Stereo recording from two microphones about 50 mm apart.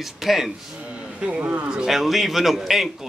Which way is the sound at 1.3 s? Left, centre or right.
Right.